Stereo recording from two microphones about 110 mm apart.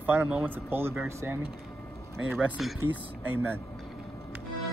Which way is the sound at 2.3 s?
15° right (ahead or behind).